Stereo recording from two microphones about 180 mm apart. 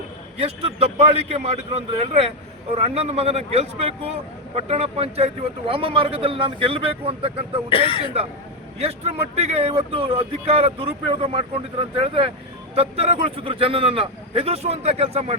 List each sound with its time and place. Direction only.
0.3 s speech: 35° right (ahead or behind)
7.7 s speech: 30° left (ahead or behind)
8.8 s speech: 35° right (ahead or behind)